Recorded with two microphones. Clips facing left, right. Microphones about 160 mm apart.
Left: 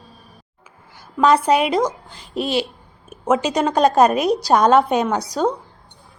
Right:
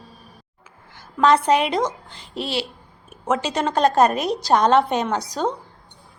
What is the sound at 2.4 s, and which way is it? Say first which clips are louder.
Speech: left 5 dB; 15° left (ahead or behind).